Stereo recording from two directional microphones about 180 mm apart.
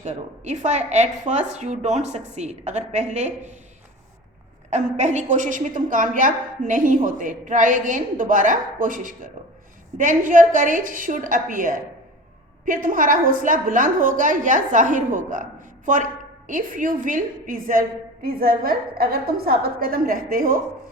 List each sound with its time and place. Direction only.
0.0 s a woman's voice: 40° right (ahead or behind)
4.7 s a woman's voice: 40° right (ahead or behind)
16.5 s a woman's voice: 50° right (ahead or behind)